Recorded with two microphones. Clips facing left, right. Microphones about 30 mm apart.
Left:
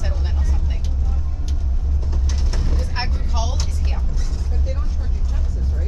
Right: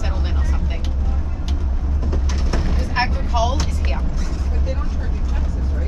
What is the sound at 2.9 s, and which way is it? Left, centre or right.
Vehicle, centre.